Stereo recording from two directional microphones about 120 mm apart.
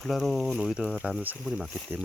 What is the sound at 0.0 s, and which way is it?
Speech, centre (ahead or behind).